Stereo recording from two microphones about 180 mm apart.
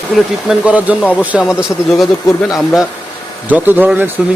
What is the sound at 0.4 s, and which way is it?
Speech, 5° right (ahead or behind).